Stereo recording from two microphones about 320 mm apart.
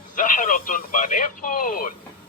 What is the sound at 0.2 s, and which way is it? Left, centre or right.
Speech, left.